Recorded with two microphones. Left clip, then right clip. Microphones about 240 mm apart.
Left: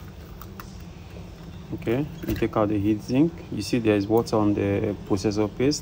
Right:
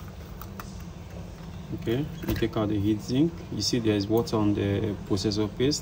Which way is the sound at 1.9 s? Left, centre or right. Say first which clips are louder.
Left 3 dB; centre.